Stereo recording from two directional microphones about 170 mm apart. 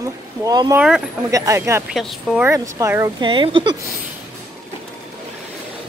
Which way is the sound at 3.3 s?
30° right (ahead or behind).